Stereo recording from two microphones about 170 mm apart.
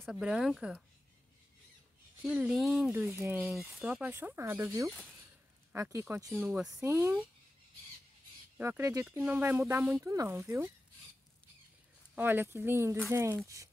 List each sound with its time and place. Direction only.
0.0 s speech: centre (ahead or behind)
2.2 s speech: 5° right (ahead or behind)
6.3 s speech: 5° right (ahead or behind)
8.5 s speech: 15° right (ahead or behind)
12.2 s speech: 10° right (ahead or behind)